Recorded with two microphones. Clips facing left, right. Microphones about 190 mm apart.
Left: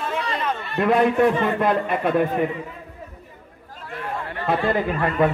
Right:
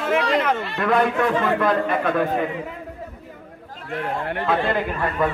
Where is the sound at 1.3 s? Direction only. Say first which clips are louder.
Right 1 dB; 90° right.